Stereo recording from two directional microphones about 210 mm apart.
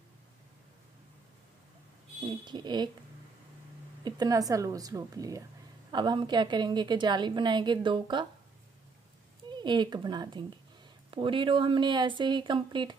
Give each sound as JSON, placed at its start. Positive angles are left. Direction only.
{"t": 2.2, "sound": "a woman's voice", "side_deg": -20}
{"t": 4.0, "sound": "a woman's voice", "side_deg": -20}
{"t": 9.5, "sound": "a woman's voice", "side_deg": -20}